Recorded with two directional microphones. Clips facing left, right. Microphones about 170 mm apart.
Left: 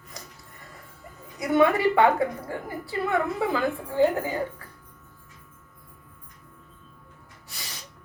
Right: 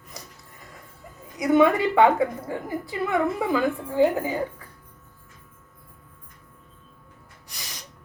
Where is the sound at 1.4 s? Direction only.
20° right (ahead or behind).